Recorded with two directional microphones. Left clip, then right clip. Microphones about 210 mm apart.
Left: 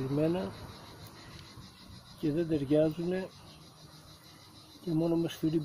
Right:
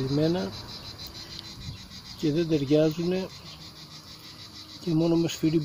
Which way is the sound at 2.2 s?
15° right (ahead or behind).